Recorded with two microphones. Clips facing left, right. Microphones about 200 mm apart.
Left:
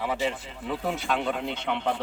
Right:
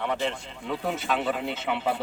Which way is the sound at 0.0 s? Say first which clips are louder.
Even; 5° left (ahead or behind).